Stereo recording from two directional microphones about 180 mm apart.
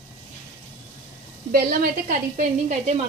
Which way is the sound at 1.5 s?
55° right (ahead or behind).